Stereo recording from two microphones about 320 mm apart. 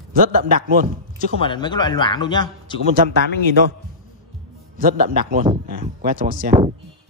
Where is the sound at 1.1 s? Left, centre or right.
Centre.